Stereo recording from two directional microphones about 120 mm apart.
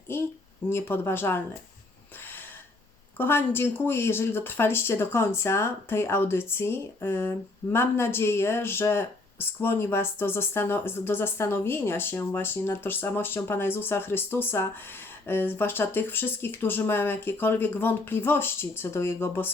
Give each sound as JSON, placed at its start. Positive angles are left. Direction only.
{"t": 0.1, "sound": "speech", "side_deg": 20}
{"t": 3.2, "sound": "speech", "side_deg": 20}